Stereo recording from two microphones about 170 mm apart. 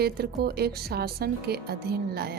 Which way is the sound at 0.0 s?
65° right (ahead or behind).